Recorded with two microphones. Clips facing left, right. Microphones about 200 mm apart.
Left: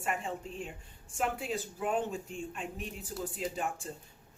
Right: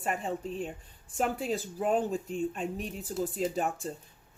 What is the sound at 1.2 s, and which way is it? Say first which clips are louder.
Speech: right 4 dB; 40° right (ahead or behind).